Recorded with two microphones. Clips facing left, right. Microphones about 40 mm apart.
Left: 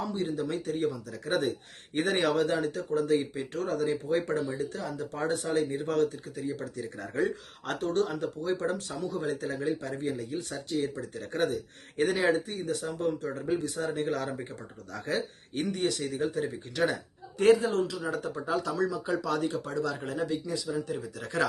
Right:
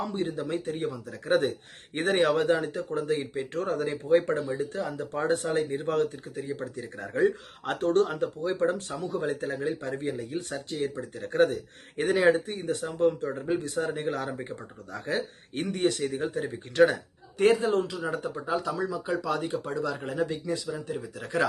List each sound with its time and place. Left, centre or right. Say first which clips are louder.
0.0 s speech: right 1 dB; right
4.3 s speech: right 2 dB; right
7.8 s speech: right 5 dB; right
10.9 s speech: right 7 dB; right
11.9 s speech: right 3 dB; right
15.5 s speech: right 3 dB; right
17.3 s speech: even; right
18.0 s speech: right 2 dB; centre
18.3 s speech: left 2 dB; centre
19.6 s speech: right 1 dB; centre
20.9 s speech: even; centre